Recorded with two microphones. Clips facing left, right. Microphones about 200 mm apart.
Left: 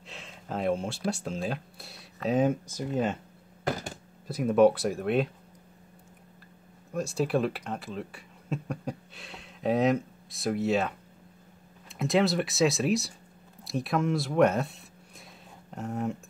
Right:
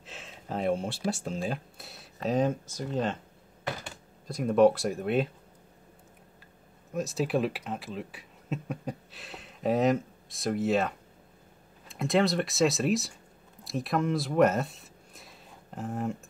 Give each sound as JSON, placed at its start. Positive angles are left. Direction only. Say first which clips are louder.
{"t": 0.0, "sound": "speech", "louder": "even", "side_deg": 0}
{"t": 3.6, "sound": "a sound", "louder": "left 5 dB", "side_deg": 40}
{"t": 4.3, "sound": "speech", "louder": "left 1 dB", "side_deg": 5}
{"t": 6.9, "sound": "speech", "louder": "left 1 dB", "side_deg": 0}